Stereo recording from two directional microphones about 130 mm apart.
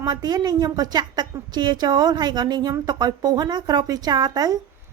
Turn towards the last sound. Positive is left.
turn(degrees=-30)  # may be behind; listen again after turning